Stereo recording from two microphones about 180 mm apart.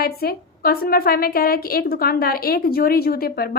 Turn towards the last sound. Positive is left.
turn(degrees=55)  # may be behind; listen again after turning